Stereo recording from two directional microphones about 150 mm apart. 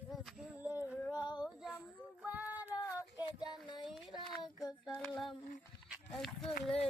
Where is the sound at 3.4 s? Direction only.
30° left (ahead or behind).